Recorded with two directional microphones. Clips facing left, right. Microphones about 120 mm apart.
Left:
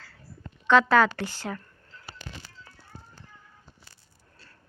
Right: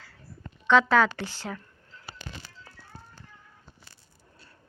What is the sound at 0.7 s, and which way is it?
Speech, 5° left (ahead or behind).